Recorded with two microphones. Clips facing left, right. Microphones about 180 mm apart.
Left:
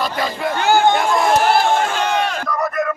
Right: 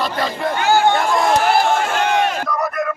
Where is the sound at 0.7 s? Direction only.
15° left (ahead or behind).